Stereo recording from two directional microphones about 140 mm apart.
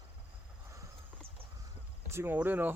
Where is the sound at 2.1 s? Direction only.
15° right (ahead or behind).